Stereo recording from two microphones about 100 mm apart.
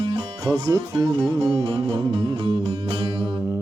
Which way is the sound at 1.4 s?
60° right (ahead or behind).